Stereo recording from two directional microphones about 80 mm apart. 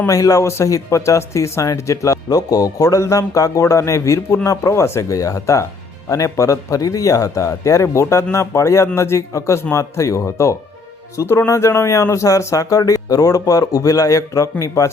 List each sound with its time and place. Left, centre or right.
0.1 s speech: left